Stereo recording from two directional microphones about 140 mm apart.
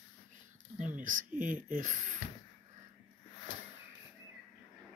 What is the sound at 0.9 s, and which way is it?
Speech, 70° right (ahead or behind).